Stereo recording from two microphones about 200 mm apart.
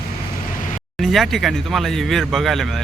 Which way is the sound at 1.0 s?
Centre (ahead or behind).